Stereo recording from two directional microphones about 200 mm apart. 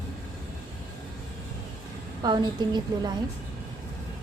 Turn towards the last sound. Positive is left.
turn(degrees=-20)  # may be behind; listen again after turning